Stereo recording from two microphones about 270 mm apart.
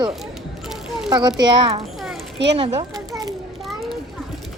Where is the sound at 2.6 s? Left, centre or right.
Right.